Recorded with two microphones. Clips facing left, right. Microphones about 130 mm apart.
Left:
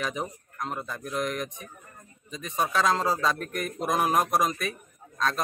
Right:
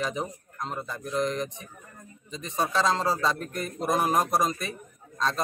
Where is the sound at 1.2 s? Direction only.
25° right (ahead or behind).